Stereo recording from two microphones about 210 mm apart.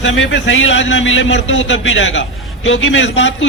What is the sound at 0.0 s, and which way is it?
A man's voice, 65° left (ahead or behind).